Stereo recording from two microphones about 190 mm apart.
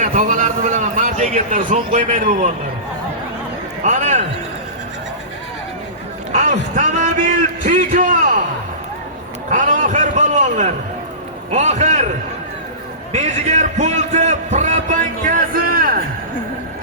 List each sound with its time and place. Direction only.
0.0 s a man's voice: 40° right (ahead or behind)
3.8 s a man's voice: 40° right (ahead or behind)
6.3 s a man's voice: 40° right (ahead or behind)
9.5 s a man's voice: 40° right (ahead or behind)
13.1 s a man's voice: 40° right (ahead or behind)